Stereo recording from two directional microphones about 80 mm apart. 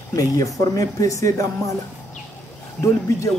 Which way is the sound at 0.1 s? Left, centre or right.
Left.